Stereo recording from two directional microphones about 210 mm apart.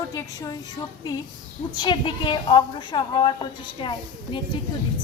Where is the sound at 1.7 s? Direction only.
20° left (ahead or behind).